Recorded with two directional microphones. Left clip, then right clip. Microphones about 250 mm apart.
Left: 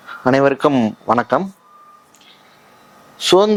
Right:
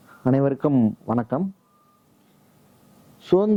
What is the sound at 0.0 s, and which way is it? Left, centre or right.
A man's voice, centre.